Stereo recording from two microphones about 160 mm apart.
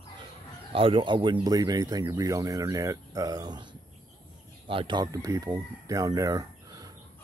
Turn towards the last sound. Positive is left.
turn(degrees=-20)  # may be behind; listen again after turning